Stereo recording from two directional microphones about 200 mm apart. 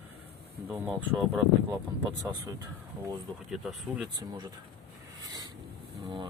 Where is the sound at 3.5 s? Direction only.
5° right (ahead or behind).